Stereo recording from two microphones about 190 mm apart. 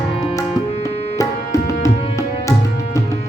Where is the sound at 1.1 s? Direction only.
15° left (ahead or behind).